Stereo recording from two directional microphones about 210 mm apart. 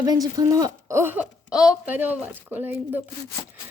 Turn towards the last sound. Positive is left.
turn(degrees=-10)  # may be behind; listen again after turning